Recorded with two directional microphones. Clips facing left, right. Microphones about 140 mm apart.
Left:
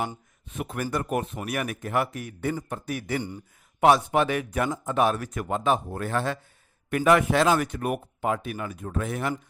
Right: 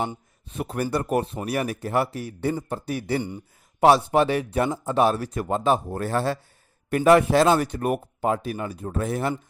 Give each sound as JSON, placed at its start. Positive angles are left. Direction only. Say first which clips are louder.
{"t": 0.4, "sound": "a man's voice", "louder": "right 3 dB", "side_deg": -35}